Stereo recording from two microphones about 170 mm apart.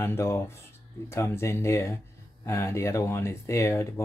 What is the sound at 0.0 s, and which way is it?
Speech, 15° left (ahead or behind).